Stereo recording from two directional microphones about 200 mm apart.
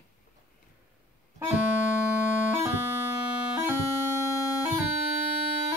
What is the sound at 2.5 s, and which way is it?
Music, 15° right (ahead or behind).